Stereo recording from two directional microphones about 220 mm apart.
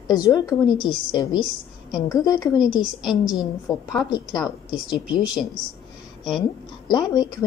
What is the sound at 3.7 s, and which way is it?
Speech, 15° left (ahead or behind).